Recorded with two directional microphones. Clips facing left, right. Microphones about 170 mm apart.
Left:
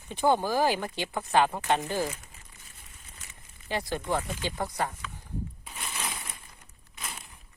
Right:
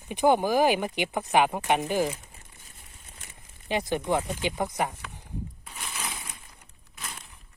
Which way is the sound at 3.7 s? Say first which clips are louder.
Right 4 dB; 20° right (ahead or behind).